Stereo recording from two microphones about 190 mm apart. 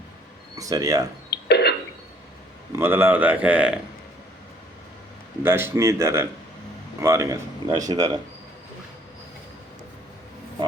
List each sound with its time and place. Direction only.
0.5 s speech: 20° right (ahead or behind)
1.3 s throat clearing: 60° left (ahead or behind)
2.7 s speech: 10° right (ahead or behind)
5.4 s speech: 10° right (ahead or behind)